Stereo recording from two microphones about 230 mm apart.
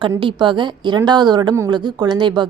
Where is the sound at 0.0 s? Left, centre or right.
Right.